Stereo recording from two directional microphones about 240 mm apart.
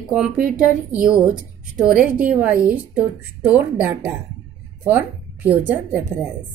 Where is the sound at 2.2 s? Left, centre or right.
Centre.